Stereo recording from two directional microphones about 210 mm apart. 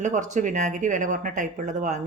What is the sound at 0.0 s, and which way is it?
Speech, 35° right (ahead or behind).